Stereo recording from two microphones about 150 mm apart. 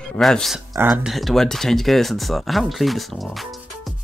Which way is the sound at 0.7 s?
10° right (ahead or behind).